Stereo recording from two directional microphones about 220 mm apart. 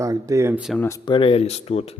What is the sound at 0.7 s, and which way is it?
Speech, 15° left (ahead or behind).